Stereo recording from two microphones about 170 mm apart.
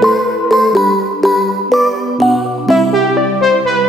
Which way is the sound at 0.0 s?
Centre (ahead or behind).